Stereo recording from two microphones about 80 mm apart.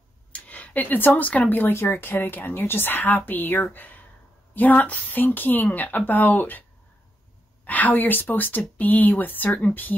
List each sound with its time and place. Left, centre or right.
0.3 s speech: centre
7.6 s speech: left